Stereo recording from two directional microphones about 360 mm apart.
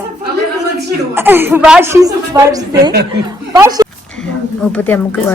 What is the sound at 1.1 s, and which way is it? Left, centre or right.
Speech, centre.